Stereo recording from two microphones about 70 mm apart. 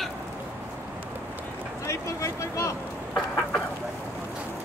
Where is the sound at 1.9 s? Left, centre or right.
Left.